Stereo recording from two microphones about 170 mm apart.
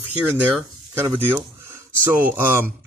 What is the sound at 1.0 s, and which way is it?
Speech, 10° right (ahead or behind).